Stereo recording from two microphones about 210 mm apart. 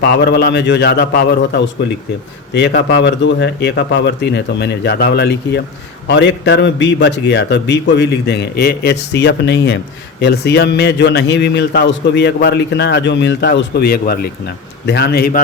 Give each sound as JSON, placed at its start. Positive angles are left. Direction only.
{"t": 0.0, "sound": "a man's voice", "side_deg": 50}